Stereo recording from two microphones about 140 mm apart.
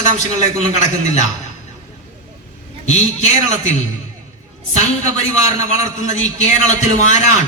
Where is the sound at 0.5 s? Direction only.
55° left (ahead or behind).